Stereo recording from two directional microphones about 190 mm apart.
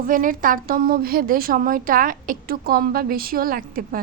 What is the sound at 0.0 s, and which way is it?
Speech, 45° right (ahead or behind).